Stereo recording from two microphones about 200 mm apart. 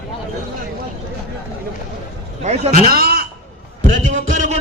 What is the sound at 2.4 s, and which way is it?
Speech, 35° right (ahead or behind).